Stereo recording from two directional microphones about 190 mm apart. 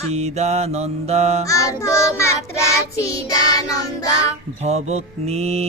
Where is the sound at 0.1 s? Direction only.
35° right (ahead or behind).